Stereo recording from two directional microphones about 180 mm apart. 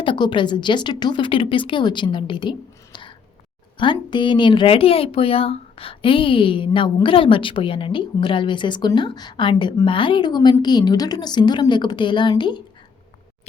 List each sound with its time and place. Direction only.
0.0 s speech: 25° left (ahead or behind)